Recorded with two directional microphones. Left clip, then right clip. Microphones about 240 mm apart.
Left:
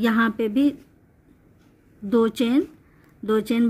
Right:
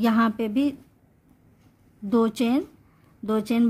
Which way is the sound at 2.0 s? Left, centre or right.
Centre.